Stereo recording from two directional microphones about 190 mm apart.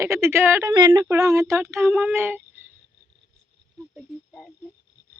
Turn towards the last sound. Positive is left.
turn(degrees=0)  # may be behind; listen again after turning